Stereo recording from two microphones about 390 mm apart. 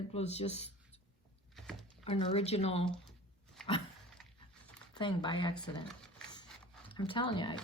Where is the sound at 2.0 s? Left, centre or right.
Centre.